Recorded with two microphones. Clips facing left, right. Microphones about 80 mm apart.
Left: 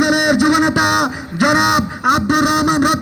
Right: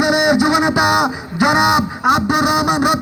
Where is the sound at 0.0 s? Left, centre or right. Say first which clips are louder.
Even; left.